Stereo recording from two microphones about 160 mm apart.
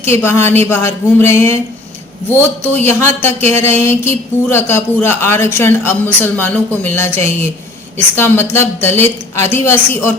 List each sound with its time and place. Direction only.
0.0 s speech: 15° left (ahead or behind)
2.8 s speech: 15° left (ahead or behind)